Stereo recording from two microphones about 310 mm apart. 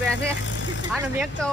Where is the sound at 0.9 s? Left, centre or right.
Centre.